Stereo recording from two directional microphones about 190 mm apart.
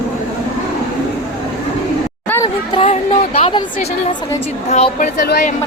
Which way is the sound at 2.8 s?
30° left (ahead or behind).